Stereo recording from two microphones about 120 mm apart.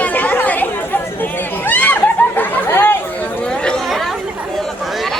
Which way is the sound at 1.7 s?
15° left (ahead or behind).